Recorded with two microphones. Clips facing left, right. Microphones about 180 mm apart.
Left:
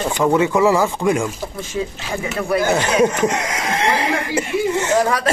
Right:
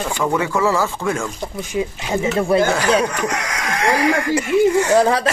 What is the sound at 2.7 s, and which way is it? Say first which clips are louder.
Speech: left 1 dB; 25° left (ahead or behind).